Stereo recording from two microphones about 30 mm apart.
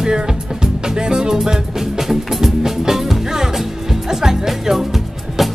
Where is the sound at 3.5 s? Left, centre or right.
Centre.